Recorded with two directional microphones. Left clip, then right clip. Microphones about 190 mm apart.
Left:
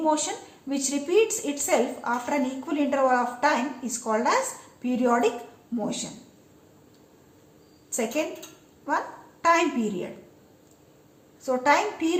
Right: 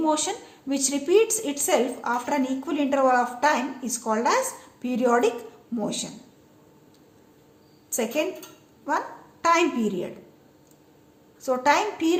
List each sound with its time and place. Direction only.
0.0 s a woman's voice: 40° right (ahead or behind)
7.9 s a woman's voice: 35° right (ahead or behind)
11.4 s a woman's voice: 35° right (ahead or behind)